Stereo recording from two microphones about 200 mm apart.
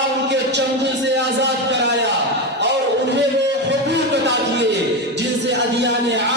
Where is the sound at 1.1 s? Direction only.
60° right (ahead or behind).